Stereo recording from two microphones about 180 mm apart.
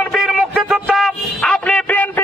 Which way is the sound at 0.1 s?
Centre (ahead or behind).